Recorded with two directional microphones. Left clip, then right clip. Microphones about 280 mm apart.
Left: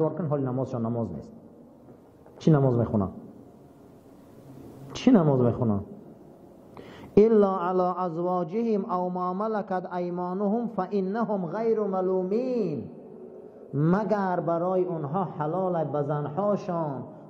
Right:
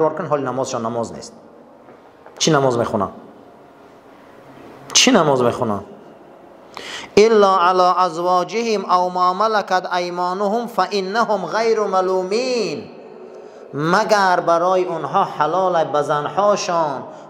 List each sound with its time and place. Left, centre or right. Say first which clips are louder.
0.0 s a man's voice: right 9 dB; centre
2.3 s a man's voice: right 9 dB; centre
4.8 s a woman's voice: right 10 dB; centre